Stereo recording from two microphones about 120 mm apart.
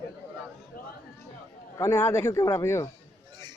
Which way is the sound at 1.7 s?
20° left (ahead or behind).